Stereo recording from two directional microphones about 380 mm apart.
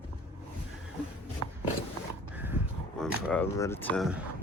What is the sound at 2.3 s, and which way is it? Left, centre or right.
Dog, centre.